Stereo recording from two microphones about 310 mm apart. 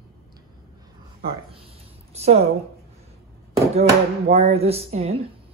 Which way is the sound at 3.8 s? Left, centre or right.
Centre.